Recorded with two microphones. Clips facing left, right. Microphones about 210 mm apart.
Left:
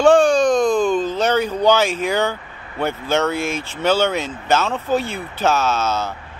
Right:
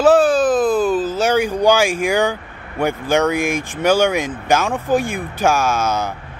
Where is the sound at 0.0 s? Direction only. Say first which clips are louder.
Even; 5° right (ahead or behind).